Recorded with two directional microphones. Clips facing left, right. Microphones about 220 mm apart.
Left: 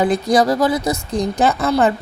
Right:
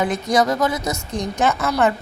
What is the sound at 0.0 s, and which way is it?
A woman's voice, 35° left (ahead or behind).